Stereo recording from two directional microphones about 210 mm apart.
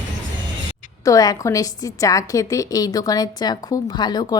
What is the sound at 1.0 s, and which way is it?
A woman's voice, 15° left (ahead or behind).